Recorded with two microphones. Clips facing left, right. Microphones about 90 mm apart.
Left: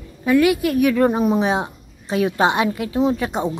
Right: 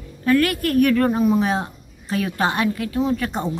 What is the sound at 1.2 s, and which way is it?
A woman's voice, 25° left (ahead or behind).